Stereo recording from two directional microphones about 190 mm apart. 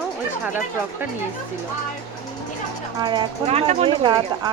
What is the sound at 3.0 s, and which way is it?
Speech, 25° right (ahead or behind).